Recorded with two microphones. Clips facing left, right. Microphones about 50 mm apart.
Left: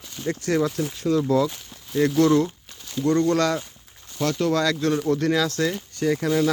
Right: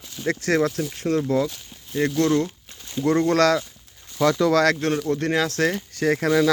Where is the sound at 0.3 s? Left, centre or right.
Right.